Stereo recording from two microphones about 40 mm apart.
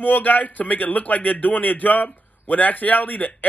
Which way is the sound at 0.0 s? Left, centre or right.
Left.